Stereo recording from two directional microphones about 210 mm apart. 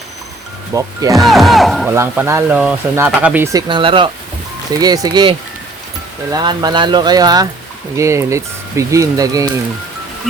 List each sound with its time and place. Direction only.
0.7 s speech: 15° right (ahead or behind)
1.1 s speech: centre (ahead or behind)
1.9 s speech: 15° right (ahead or behind)
3.7 s speech: 25° right (ahead or behind)
6.3 s speech: 20° right (ahead or behind)